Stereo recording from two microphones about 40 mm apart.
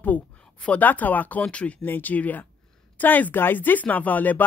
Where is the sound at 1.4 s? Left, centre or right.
Left.